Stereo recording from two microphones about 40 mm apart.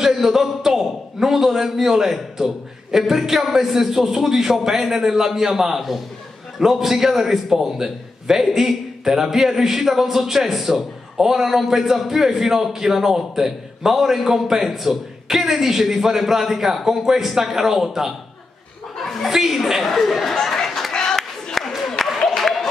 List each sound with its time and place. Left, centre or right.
0.0 s a man's voice: centre
19.8 s speech: centre
20.9 s a sound: centre
21.7 s applause: centre